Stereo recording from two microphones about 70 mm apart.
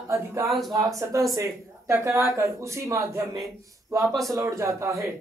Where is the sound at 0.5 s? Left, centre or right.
Centre.